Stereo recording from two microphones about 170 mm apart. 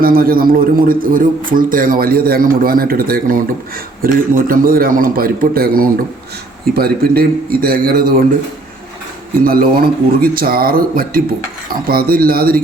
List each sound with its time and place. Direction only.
0.0 s a man's voice: 60° right (ahead or behind)
9.4 s a man's voice: 60° right (ahead or behind)